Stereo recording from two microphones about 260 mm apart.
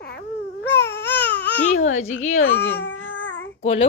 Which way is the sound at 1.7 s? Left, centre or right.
Left.